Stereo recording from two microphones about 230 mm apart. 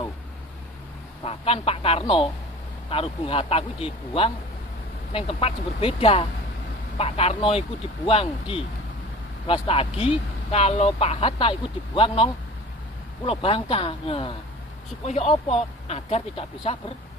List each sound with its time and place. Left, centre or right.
1.2 s speech: left